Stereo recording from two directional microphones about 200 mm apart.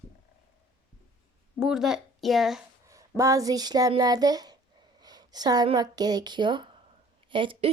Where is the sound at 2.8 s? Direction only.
15° right (ahead or behind).